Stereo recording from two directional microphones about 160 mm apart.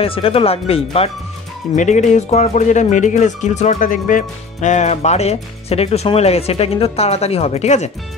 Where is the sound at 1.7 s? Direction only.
50° left (ahead or behind).